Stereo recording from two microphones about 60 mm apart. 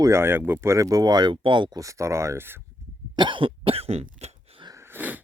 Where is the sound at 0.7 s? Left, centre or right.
Right.